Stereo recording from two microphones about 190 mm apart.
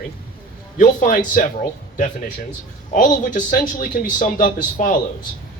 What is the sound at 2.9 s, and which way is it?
A man's voice, 40° left (ahead or behind).